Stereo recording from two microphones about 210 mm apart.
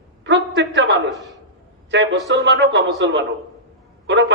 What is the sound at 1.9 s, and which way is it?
A man's voice, 60° right (ahead or behind).